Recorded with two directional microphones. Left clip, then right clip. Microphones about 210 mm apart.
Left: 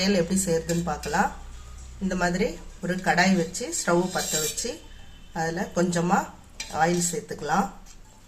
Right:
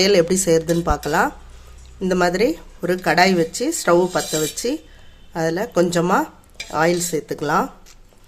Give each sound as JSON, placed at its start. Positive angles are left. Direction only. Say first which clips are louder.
{"t": 0.0, "sound": "speech", "louder": "right 10 dB", "side_deg": -50}